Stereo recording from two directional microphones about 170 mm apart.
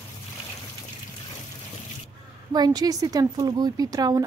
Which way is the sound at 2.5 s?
25° right (ahead or behind).